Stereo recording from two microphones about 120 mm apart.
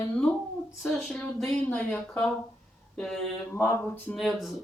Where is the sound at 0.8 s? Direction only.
5° left (ahead or behind).